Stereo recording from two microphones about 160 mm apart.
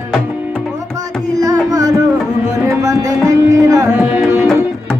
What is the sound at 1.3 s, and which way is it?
Music, 20° right (ahead or behind).